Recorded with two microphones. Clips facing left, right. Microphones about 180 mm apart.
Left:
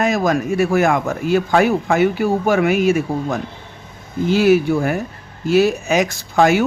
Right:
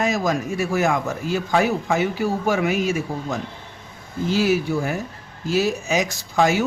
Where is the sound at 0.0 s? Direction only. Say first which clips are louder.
Left 4 dB; 60° left (ahead or behind).